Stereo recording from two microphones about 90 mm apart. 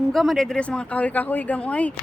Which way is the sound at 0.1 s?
Centre (ahead or behind).